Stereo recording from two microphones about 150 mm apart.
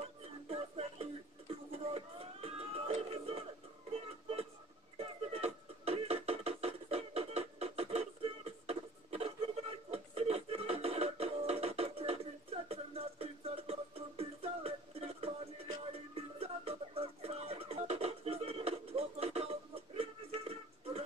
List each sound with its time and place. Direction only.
0.2 s music: 40° right (ahead or behind)
1.5 s a sound: 40° right (ahead or behind)
4.9 s music: 45° right (ahead or behind)